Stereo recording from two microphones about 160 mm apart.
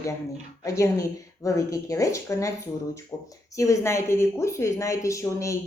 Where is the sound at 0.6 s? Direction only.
20° left (ahead or behind).